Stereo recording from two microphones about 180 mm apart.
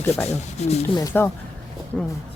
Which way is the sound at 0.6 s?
40° left (ahead or behind).